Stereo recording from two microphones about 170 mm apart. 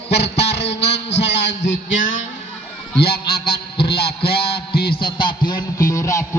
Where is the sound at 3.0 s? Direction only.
65° left (ahead or behind).